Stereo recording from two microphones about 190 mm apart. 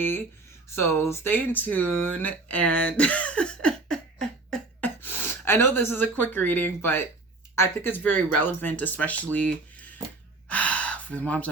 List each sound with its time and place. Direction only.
0.8 s speech: 10° left (ahead or behind)
9.3 s a sound: 10° left (ahead or behind)
10.5 s gasp: 5° left (ahead or behind)